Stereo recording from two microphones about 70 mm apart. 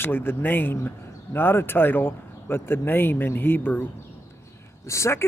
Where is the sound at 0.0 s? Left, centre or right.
Left.